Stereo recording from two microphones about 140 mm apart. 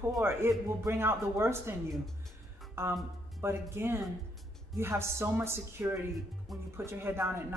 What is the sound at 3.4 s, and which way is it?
Speech, 15° right (ahead or behind).